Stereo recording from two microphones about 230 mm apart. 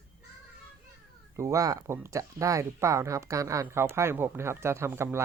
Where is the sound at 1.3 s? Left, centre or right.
Centre.